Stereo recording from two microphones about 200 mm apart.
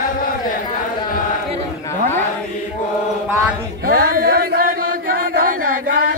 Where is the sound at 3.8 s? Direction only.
45° right (ahead or behind).